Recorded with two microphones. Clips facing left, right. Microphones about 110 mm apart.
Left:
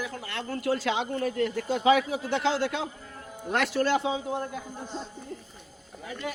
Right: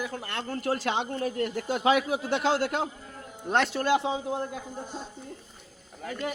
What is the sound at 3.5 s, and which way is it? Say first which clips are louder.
Speech: right 1 dB; 25° right (ahead or behind).